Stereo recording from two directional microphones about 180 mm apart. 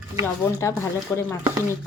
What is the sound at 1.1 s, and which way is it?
Speech, 15° left (ahead or behind).